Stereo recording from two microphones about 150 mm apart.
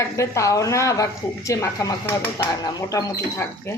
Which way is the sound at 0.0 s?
20° left (ahead or behind).